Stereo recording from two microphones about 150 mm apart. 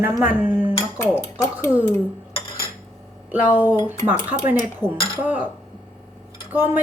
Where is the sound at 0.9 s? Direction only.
20° left (ahead or behind).